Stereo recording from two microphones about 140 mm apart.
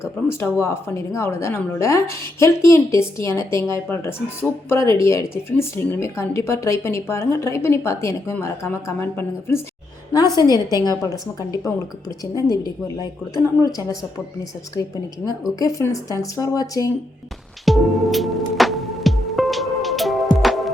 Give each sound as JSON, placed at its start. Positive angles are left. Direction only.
{"t": 0.0, "sound": "a woman's voice", "side_deg": 20}
{"t": 13.3, "sound": "a woman's voice", "side_deg": 20}
{"t": 14.8, "sound": "a woman's voice", "side_deg": 25}
{"t": 17.7, "sound": "music", "side_deg": 0}